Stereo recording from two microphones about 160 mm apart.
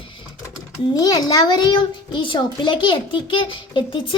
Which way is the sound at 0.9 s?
25° left (ahead or behind).